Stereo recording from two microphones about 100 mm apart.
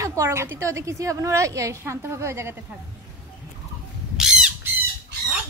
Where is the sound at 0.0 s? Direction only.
30° right (ahead or behind).